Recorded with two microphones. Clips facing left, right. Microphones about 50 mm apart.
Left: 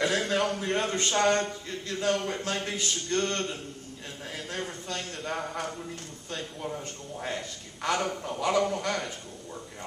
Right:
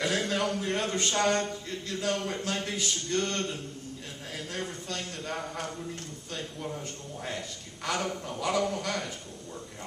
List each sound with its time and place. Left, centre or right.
0.0 s speech: centre